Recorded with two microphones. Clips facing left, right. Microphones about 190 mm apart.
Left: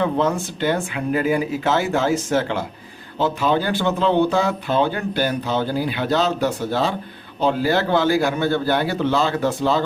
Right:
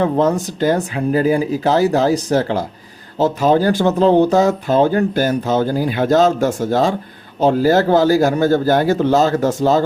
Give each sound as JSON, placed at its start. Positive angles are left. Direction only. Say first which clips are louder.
{"t": 0.0, "sound": "speech", "louder": "right 4 dB", "side_deg": -40}